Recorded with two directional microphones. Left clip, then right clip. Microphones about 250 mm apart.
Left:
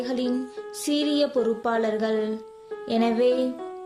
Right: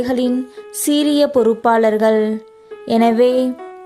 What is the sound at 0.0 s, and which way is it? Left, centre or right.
Speech, right.